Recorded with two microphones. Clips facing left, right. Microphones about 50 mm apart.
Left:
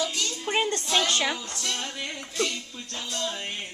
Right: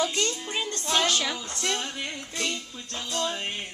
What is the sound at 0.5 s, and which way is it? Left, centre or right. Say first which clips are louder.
Music: left 6 dB; left.